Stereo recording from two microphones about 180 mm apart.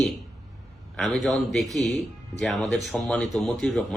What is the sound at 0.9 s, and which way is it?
Speech, centre (ahead or behind).